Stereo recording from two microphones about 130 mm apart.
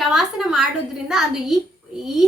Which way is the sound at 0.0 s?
Centre (ahead or behind).